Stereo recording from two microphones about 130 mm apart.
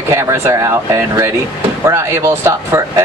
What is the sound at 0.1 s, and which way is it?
Speech, 20° right (ahead or behind).